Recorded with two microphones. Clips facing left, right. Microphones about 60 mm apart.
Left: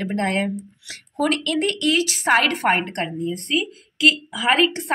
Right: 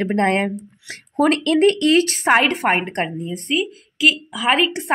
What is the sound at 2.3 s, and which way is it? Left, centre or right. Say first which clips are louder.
A woman's voice: even; centre.